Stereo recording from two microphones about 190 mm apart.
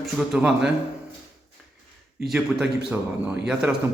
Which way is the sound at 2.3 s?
Centre (ahead or behind).